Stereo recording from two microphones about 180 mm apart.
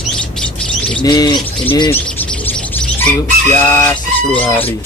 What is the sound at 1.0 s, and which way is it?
Speech, 20° left (ahead or behind).